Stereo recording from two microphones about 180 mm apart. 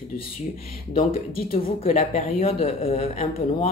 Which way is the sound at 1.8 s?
35° left (ahead or behind).